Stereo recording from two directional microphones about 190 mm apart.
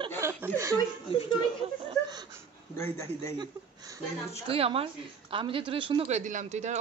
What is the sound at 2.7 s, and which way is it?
Speech, 15° left (ahead or behind).